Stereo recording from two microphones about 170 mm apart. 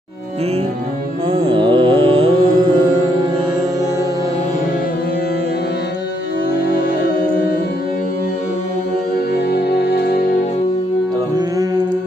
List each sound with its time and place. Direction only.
1.3 s music: 30° right (ahead or behind)
9.5 s music: 75° left (ahead or behind)